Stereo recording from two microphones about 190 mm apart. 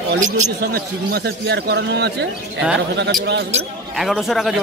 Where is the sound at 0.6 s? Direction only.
55° right (ahead or behind).